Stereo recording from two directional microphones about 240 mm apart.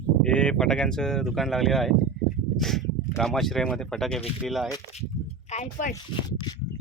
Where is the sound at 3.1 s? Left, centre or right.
Centre.